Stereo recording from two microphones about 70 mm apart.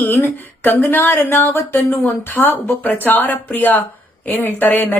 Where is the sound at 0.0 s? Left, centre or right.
Left.